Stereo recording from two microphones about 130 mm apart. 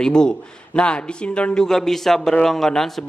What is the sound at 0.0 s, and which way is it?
A man's voice, 5° left (ahead or behind).